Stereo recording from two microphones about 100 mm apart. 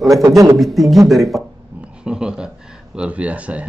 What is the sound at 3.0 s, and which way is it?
Speech, 15° right (ahead or behind).